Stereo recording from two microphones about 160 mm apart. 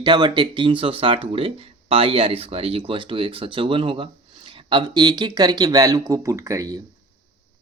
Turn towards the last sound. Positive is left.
turn(degrees=-20)  # may be behind; listen again after turning